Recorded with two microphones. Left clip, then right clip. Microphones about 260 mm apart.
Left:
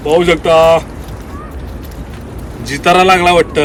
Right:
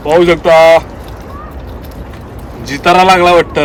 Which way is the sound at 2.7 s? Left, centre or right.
Right.